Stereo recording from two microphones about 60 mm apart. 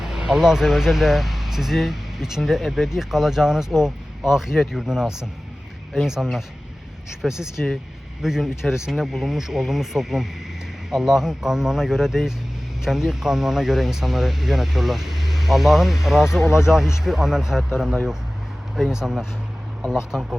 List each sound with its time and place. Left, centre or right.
0.0 s speech: centre
16.4 s speech: left
16.6 s speech: centre